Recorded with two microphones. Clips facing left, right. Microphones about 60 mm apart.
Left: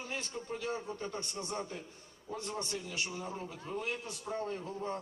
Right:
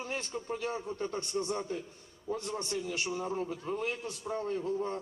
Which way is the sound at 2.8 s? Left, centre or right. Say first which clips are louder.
Right 5 dB; right.